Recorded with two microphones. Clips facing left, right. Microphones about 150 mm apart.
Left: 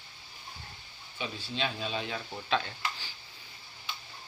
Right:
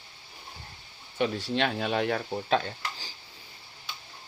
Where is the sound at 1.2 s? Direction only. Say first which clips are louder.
Right 8 dB; 70° right (ahead or behind).